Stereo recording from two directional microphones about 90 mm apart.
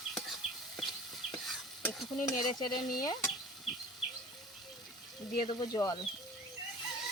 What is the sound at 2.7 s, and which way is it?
Speech, 50° left (ahead or behind).